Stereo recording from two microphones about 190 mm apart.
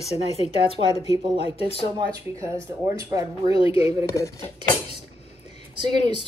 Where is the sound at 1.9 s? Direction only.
20° right (ahead or behind).